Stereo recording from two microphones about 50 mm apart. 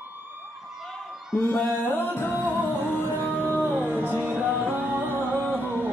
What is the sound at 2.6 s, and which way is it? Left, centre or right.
Music, left.